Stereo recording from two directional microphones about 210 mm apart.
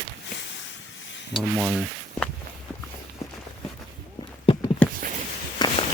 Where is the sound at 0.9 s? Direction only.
60° left (ahead or behind).